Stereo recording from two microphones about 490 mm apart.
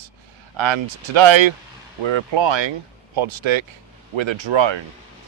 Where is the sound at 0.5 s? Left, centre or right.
Right.